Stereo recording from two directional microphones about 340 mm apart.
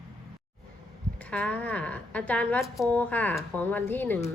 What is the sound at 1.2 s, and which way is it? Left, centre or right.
Speech, centre.